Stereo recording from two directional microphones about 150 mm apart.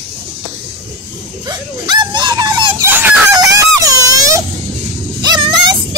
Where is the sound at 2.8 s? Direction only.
15° right (ahead or behind).